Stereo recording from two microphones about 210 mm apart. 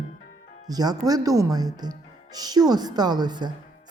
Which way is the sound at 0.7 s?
20° right (ahead or behind).